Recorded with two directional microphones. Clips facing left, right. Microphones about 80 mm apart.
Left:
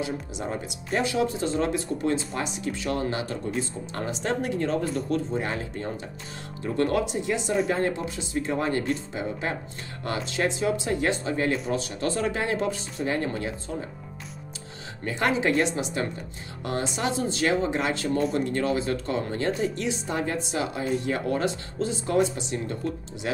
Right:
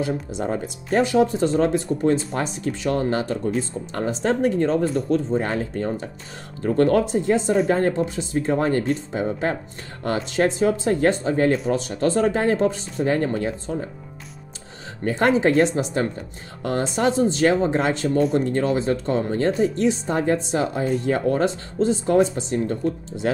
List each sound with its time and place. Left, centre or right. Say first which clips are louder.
0.4 s speech: right 7 dB; right
0.9 s speech: right 7 dB; right
15.0 s speech: right 6 dB; right